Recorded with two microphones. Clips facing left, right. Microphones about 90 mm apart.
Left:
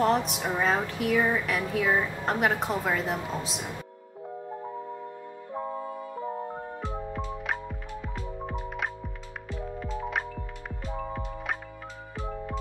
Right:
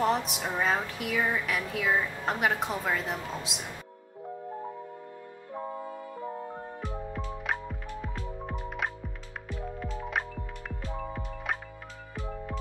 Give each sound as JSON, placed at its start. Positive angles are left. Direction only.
{"t": 0.0, "sound": "a woman's voice", "side_deg": 0}
{"t": 5.5, "sound": "music", "side_deg": 20}
{"t": 7.4, "sound": "music", "side_deg": 0}
{"t": 10.8, "sound": "music", "side_deg": 20}